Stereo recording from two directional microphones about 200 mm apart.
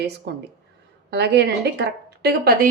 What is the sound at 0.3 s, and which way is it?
A woman's voice, 55° right (ahead or behind).